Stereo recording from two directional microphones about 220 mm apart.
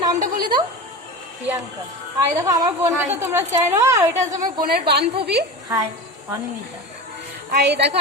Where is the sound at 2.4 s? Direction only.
15° right (ahead or behind).